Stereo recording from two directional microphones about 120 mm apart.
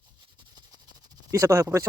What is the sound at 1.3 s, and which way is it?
Speech, 25° right (ahead or behind).